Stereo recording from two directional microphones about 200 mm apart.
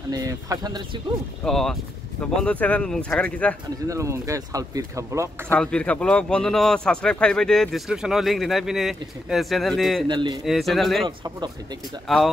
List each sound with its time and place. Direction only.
0.1 s speech: 20° right (ahead or behind)
1.4 s speech: centre (ahead or behind)
3.8 s speech: 15° right (ahead or behind)
5.5 s speech: 5° left (ahead or behind)
10.0 s speech: 25° right (ahead or behind)
10.4 s speech: centre (ahead or behind)
11.1 s speech: 20° right (ahead or behind)
12.1 s speech: centre (ahead or behind)